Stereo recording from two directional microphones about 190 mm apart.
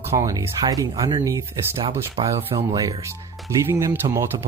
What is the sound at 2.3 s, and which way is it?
Speech, 30° right (ahead or behind).